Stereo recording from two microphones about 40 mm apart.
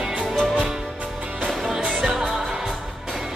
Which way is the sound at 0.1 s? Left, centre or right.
Right.